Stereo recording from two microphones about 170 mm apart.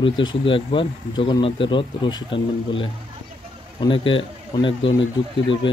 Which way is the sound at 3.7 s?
30° left (ahead or behind).